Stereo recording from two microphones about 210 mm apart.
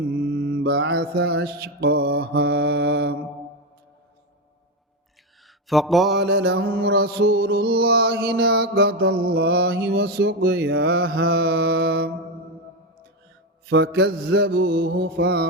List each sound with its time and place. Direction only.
0.1 s mantra: 45° right (ahead or behind)
2.2 s music: 50° right (ahead or behind)
5.6 s mantra: centre (ahead or behind)
6.1 s music: 55° right (ahead or behind)
13.7 s music: 55° right (ahead or behind)